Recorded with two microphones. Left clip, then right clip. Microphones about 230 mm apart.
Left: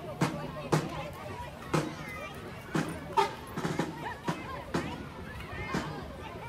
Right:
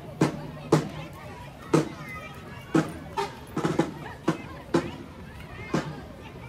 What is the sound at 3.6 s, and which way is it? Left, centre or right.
Music, right.